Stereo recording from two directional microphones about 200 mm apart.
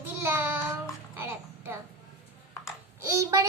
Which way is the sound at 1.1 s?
10° right (ahead or behind).